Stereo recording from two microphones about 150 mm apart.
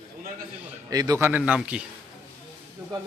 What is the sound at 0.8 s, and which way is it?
Speech, 25° right (ahead or behind).